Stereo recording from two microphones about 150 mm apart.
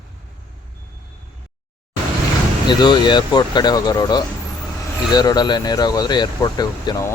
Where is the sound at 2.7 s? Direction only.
30° left (ahead or behind).